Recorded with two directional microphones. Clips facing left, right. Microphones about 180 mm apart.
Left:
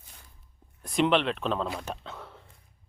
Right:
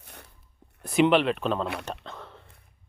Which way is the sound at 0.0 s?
70° right (ahead or behind).